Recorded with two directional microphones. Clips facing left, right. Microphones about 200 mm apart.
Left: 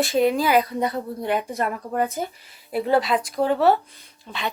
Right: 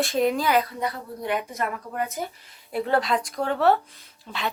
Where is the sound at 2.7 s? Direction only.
5° left (ahead or behind).